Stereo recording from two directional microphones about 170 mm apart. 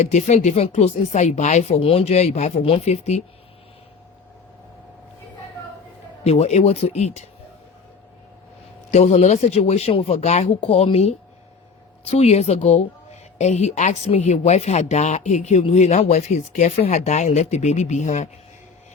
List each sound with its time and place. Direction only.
0.0 s a woman's voice: 45° left (ahead or behind)
6.2 s a woman's voice: 40° left (ahead or behind)
8.9 s a woman's voice: 40° left (ahead or behind)